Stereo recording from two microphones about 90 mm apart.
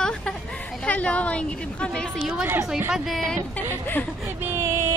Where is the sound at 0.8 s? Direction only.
15° left (ahead or behind).